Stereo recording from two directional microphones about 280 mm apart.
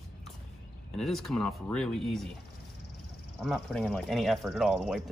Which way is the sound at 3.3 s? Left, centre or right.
Centre.